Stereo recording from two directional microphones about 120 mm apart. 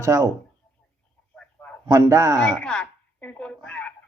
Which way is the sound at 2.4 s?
5° left (ahead or behind).